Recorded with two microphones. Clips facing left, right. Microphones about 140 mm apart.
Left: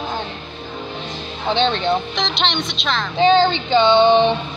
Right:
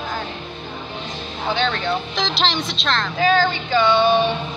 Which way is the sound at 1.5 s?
25° left (ahead or behind).